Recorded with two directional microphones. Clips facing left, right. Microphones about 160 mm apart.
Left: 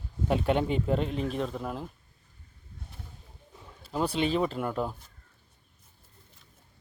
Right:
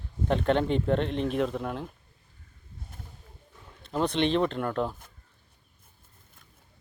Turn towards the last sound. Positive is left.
turn(degrees=5)  # may be behind; listen again after turning